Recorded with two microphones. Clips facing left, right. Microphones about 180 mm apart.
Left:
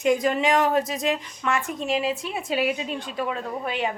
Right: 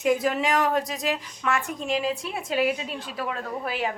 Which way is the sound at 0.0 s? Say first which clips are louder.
Left 2 dB; 5° right (ahead or behind).